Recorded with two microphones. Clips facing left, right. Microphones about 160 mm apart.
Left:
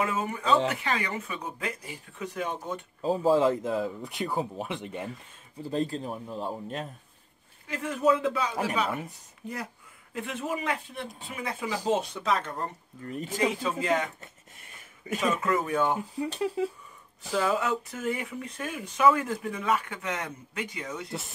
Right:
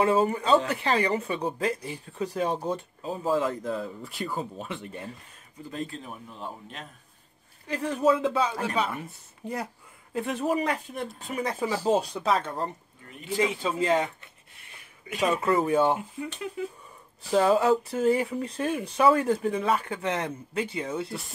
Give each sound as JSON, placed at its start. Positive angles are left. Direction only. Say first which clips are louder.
{"t": 0.0, "sound": "speech", "louder": "right 6 dB", "side_deg": -35}
{"t": 3.0, "sound": "speech", "louder": "left 5 dB", "side_deg": 35}
{"t": 5.6, "sound": "a man's voice", "louder": "left 6 dB", "side_deg": 30}
{"t": 7.6, "sound": "speech", "louder": "right 2 dB", "side_deg": -35}
{"t": 10.1, "sound": "speech", "louder": "right 6 dB", "side_deg": -35}
{"t": 13.0, "sound": "a man's voice", "louder": "left 1 dB", "side_deg": 40}
{"t": 13.6, "sound": "speech", "louder": "right 3 dB", "side_deg": -30}
{"t": 15.1, "sound": "speech", "louder": "right 3 dB", "side_deg": -35}
{"t": 16.2, "sound": "a man's voice", "louder": "left 5 dB", "side_deg": 35}
{"t": 17.2, "sound": "speech", "louder": "right 6 dB", "side_deg": -30}